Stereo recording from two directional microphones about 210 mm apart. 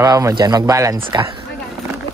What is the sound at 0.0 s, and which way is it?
Speech, 15° right (ahead or behind).